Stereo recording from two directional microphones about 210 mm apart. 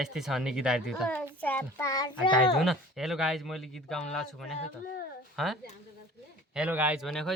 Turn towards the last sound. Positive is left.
turn(degrees=0)  # may be behind; listen again after turning